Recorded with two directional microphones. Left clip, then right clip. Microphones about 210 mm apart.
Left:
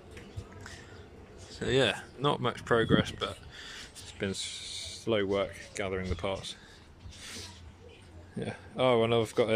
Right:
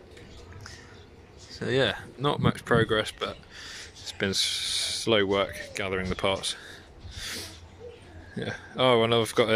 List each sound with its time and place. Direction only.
1.5 s speech: centre (ahead or behind)
7.2 s sneeze: centre (ahead or behind)
8.4 s speech: centre (ahead or behind)